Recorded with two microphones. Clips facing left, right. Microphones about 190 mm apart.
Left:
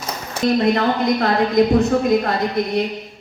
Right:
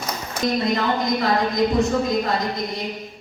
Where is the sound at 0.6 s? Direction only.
65° left (ahead or behind).